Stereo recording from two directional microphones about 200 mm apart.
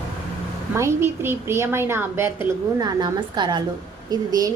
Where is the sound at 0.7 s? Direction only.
15° right (ahead or behind).